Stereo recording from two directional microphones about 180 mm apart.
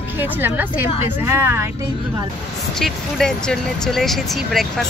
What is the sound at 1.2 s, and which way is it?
Speech, 15° right (ahead or behind).